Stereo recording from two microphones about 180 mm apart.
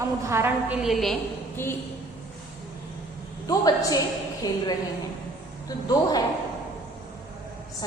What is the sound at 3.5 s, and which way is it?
A woman's voice, 20° left (ahead or behind).